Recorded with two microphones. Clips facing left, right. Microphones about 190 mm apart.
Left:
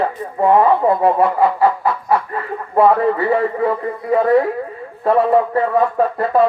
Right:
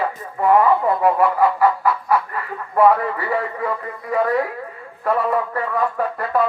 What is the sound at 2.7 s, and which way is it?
A man's voice, 25° left (ahead or behind).